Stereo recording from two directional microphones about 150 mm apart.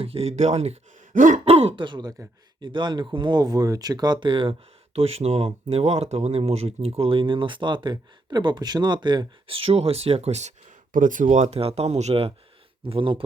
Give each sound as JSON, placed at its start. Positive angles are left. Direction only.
{"t": 0.0, "sound": "speech", "side_deg": -40}
{"t": 1.5, "sound": "speech", "side_deg": -40}